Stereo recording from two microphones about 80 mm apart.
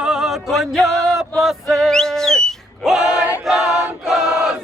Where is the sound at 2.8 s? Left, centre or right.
Centre.